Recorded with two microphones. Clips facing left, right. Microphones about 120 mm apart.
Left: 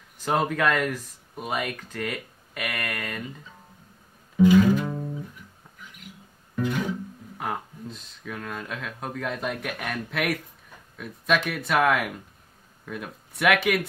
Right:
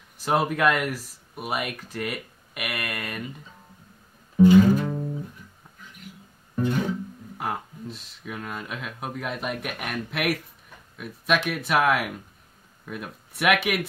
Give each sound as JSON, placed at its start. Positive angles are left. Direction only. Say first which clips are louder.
{"t": 0.2, "sound": "speech", "louder": "right 1 dB", "side_deg": -10}
{"t": 4.8, "sound": "music", "louder": "right 2 dB", "side_deg": 10}
{"t": 6.5, "sound": "music", "louder": "right 2 dB", "side_deg": -30}
{"t": 7.3, "sound": "speech", "louder": "right 1 dB", "side_deg": -5}